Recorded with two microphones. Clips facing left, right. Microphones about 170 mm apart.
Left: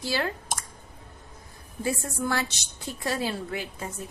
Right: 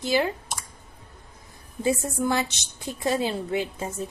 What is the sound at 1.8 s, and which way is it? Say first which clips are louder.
A woman's voice: right 5 dB; 20° right (ahead or behind).